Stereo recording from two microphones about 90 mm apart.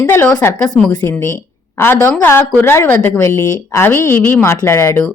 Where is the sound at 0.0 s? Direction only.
30° left (ahead or behind).